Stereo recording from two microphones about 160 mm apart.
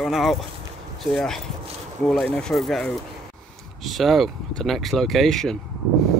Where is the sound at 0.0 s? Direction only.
Centre (ahead or behind).